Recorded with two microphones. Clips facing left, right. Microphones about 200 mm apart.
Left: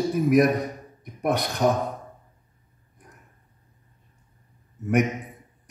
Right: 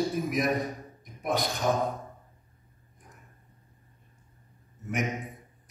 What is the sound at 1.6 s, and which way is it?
Speech, 65° left (ahead or behind).